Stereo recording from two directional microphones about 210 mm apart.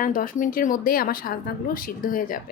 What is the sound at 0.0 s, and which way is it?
A woman's voice, 40° left (ahead or behind).